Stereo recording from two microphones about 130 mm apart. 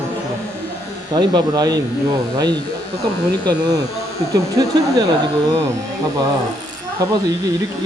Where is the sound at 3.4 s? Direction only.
30° right (ahead or behind).